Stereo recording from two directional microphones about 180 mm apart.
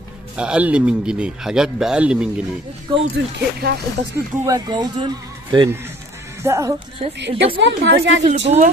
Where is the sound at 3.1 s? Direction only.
65° right (ahead or behind).